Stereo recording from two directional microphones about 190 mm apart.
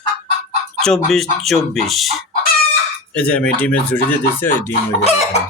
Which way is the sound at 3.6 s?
10° left (ahead or behind).